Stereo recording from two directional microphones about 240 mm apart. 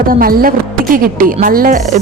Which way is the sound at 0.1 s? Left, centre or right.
Right.